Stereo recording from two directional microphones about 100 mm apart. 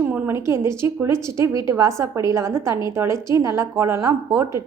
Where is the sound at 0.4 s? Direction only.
25° right (ahead or behind).